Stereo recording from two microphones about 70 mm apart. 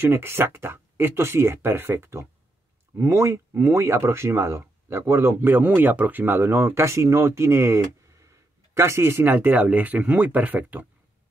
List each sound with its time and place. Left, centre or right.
0.0 s speech: right